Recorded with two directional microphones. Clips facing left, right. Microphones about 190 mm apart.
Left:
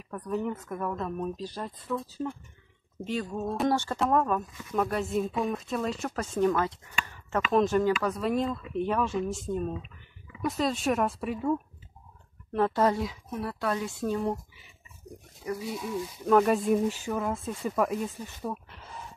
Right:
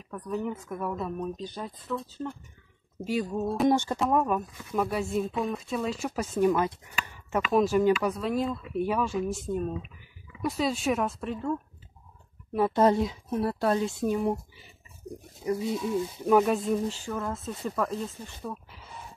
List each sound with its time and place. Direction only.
0.1 s speech: centre (ahead or behind)
3.0 s speech: 5° right (ahead or behind)
3.6 s speech: 15° right (ahead or behind); by 11.5 s 5° left (ahead or behind)
12.7 s speech: 25° right (ahead or behind)
15.0 s pig: 30° right (ahead or behind)
15.4 s speech: 25° right (ahead or behind)
16.3 s speech: centre (ahead or behind)
16.6 s speech: 15° left (ahead or behind)